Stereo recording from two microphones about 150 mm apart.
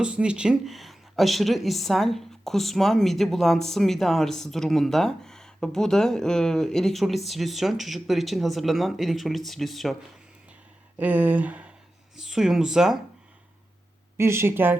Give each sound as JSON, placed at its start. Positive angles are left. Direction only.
{"t": 0.0, "sound": "speech", "side_deg": -5}
{"t": 10.9, "sound": "speech", "side_deg": -10}
{"t": 14.2, "sound": "speech", "side_deg": -15}